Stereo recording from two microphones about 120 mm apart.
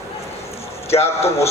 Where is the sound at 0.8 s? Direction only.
60° left (ahead or behind).